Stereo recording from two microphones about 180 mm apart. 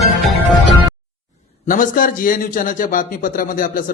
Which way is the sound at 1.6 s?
50° left (ahead or behind).